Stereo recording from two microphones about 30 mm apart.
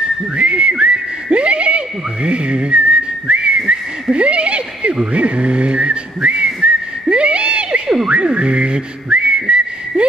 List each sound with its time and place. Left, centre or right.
0.4 s speech: right
8.1 s whistling: right